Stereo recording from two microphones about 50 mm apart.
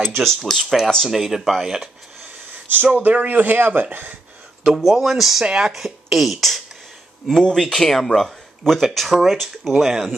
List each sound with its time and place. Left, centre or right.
0.2 s speech: centre
1.0 s speech: centre
3.0 s speech: right
4.6 s speech: centre